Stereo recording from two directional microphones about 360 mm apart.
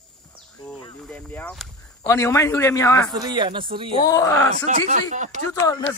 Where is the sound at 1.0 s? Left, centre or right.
Centre.